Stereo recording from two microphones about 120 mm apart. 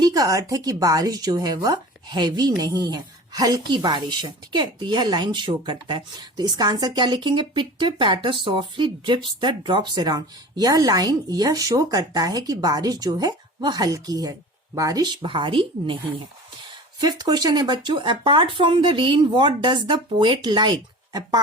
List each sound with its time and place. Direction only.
0.0 s a woman's voice: 30° right (ahead or behind)
17.0 s a woman's voice: 35° right (ahead or behind)